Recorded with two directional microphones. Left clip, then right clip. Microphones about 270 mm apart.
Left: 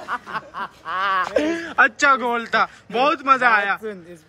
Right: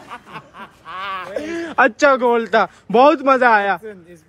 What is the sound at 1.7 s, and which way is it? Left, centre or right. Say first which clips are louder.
A man's voice: right 3 dB; centre.